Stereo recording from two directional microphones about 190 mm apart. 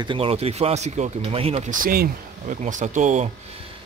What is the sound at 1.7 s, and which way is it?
Speech, 50° right (ahead or behind).